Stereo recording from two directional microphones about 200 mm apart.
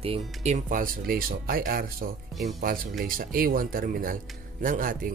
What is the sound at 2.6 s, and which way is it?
A man's voice, 45° right (ahead or behind).